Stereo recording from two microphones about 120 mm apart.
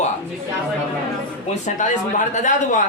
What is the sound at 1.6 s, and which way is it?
Speech, 90° left.